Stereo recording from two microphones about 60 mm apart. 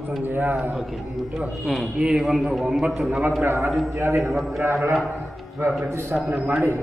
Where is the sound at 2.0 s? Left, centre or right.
Centre.